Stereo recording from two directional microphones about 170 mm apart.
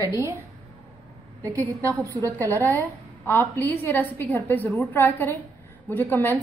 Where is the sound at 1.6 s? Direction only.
10° left (ahead or behind).